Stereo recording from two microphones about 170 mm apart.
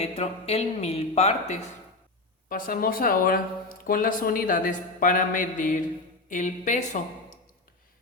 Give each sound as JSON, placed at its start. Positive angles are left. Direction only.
{"t": 0.0, "sound": "speech", "side_deg": 40}
{"t": 2.5, "sound": "speech", "side_deg": 55}